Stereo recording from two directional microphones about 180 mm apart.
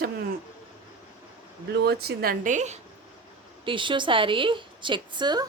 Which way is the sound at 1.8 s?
60° right (ahead or behind).